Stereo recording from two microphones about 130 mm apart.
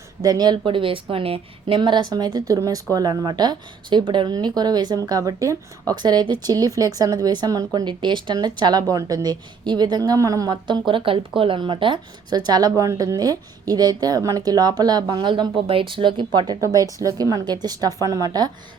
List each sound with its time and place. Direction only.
0.2 s speech: 30° right (ahead or behind)